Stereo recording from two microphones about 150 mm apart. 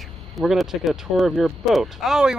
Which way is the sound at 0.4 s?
Centre (ahead or behind).